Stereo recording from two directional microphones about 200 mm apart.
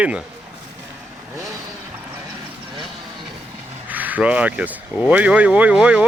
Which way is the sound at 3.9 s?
10° right (ahead or behind).